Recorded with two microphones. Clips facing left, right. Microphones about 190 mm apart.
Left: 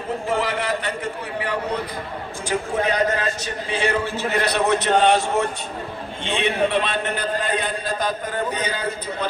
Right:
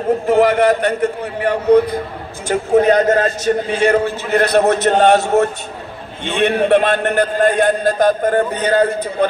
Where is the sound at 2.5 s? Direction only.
45° right (ahead or behind).